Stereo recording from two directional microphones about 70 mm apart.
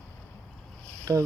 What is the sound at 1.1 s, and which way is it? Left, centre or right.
Speech, right.